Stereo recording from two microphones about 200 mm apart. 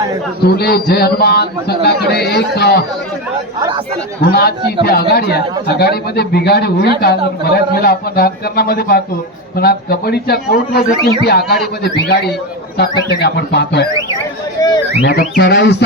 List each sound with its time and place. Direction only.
0.4 s a man's voice: 55° left (ahead or behind)
4.2 s a man's voice: 50° left (ahead or behind)
10.9 s a man's voice: 25° right (ahead or behind)
11.3 s a man's voice: 50° left (ahead or behind)
13.1 s speech: 55° left (ahead or behind)
14.6 s a sound: 15° left (ahead or behind)
15.0 s speech: 60° left (ahead or behind)